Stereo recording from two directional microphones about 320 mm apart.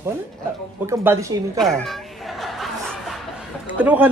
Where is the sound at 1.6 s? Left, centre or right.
Centre.